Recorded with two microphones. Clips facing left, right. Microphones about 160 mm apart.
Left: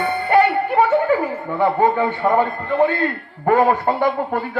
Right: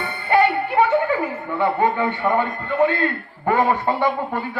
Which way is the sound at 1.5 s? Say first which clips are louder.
Left 3 dB; 40° left (ahead or behind).